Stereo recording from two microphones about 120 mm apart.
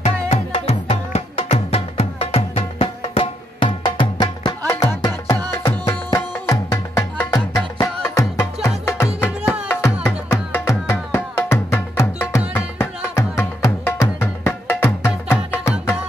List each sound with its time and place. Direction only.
0.0 s music: 60° left (ahead or behind); by 5.4 s 40° left (ahead or behind)
6.1 s tabla: 25° left (ahead or behind)
7.3 s music: 25° left (ahead or behind)